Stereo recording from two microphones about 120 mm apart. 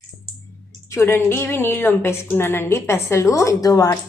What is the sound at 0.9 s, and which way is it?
A woman's voice, 20° left (ahead or behind).